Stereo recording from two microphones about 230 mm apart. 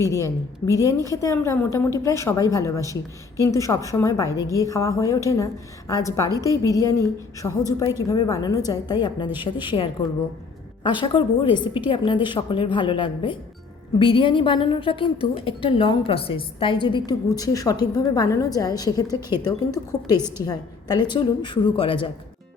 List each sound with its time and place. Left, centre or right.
0.1 s a woman's voice: centre
20.1 s a woman's voice: centre
20.4 s a woman's voice: centre